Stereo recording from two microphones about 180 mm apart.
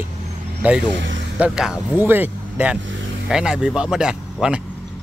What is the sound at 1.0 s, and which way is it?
Vehicle, 90° right.